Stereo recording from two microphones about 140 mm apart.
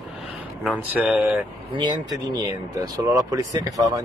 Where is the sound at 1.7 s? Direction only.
30° right (ahead or behind).